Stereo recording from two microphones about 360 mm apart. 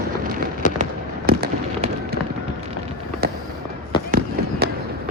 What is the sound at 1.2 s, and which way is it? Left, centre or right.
Fireworks, right.